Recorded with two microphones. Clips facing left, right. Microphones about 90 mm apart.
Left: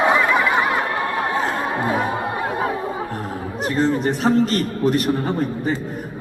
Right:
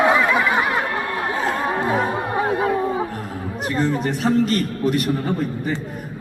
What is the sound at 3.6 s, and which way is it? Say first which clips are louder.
Chatter: left 2 dB; 25° left (ahead or behind).